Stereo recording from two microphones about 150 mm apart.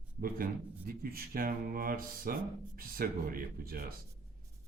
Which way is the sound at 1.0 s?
75° right (ahead or behind).